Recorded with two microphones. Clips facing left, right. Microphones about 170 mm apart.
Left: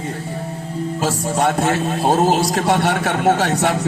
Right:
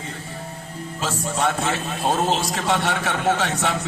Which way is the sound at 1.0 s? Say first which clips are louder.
Left 4 dB; 40° left (ahead or behind).